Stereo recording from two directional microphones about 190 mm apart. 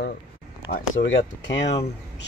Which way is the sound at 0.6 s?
50° left (ahead or behind).